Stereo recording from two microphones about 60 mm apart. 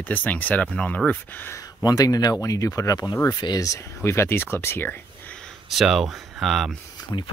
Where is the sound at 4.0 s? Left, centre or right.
Left.